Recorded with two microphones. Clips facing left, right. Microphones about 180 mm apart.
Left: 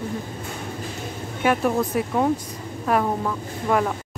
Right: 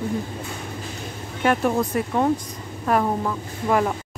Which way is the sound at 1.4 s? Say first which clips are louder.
Even; centre (ahead or behind).